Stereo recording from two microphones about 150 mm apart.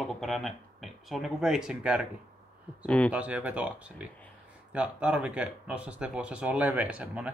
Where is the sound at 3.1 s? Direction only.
10° right (ahead or behind).